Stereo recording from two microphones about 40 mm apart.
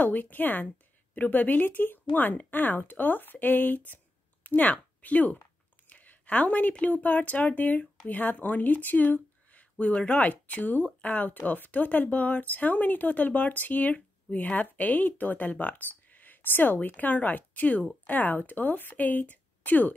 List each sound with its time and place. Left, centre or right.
0.0 s speech: left
5.9 s a sound: left
6.9 s speech: left
16.9 s speech: left